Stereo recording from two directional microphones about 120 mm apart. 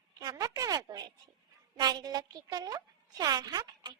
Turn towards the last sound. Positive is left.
turn(degrees=-35)  # may be behind; listen again after turning